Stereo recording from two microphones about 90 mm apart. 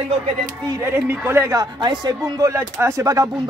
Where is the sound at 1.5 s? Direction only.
50° right (ahead or behind).